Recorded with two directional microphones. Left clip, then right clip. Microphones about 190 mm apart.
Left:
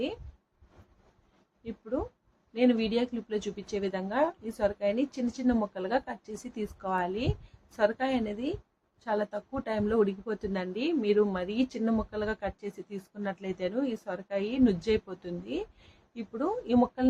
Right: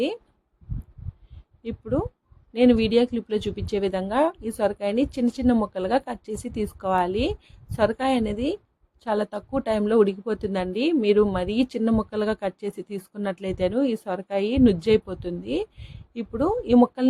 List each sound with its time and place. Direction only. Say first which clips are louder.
1.6 s a woman's voice: right 7 dB; 50° right (ahead or behind)